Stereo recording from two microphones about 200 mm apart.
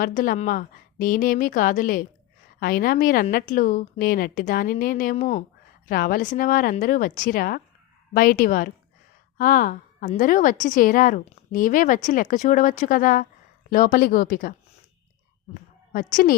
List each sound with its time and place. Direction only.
0.0 s a woman's voice: 40° left (ahead or behind)
15.9 s a woman's voice: 40° left (ahead or behind)